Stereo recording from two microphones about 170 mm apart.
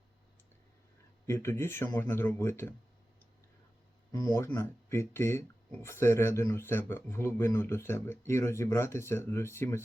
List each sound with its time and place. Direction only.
1.3 s speech: 15° left (ahead or behind)
4.1 s speech: 20° left (ahead or behind)